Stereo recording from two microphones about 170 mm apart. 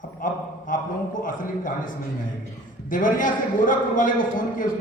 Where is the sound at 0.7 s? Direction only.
50° left (ahead or behind).